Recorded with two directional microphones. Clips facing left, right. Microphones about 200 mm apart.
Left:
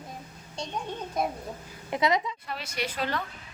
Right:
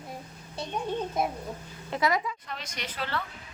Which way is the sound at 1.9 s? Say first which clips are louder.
Left 1 dB; 20° left (ahead or behind).